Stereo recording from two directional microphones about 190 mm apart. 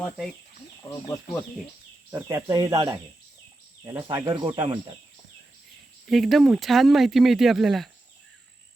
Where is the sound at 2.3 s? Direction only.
20° right (ahead or behind).